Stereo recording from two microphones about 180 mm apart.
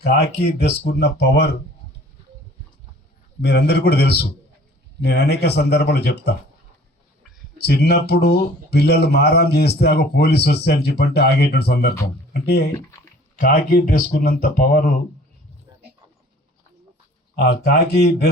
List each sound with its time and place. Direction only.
0.0 s speech: 65° left (ahead or behind)
3.4 s speech: 65° left (ahead or behind)
7.6 s speech: 60° left (ahead or behind)
13.4 s speech: 50° left (ahead or behind)
17.3 s speech: 65° left (ahead or behind)